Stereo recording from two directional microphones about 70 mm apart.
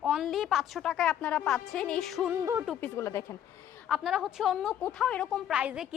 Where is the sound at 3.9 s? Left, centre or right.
Centre.